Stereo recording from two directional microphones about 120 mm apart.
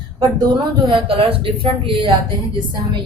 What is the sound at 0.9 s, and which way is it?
A woman's voice, 45° right (ahead or behind).